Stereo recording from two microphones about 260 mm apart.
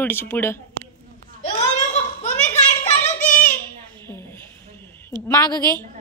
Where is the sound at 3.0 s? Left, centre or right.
Left.